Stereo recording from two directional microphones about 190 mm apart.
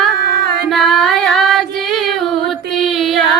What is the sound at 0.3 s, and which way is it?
Music, 60° right (ahead or behind).